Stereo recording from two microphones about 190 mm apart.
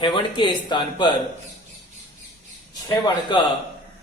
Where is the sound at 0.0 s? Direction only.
25° left (ahead or behind).